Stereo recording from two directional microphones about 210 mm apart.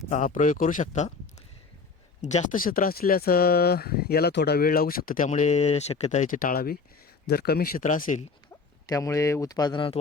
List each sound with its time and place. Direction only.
0.1 s speech: 35° left (ahead or behind)
2.2 s speech: 35° left (ahead or behind)
8.9 s speech: 15° left (ahead or behind)